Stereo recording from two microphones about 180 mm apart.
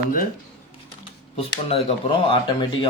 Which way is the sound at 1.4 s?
30° left (ahead or behind).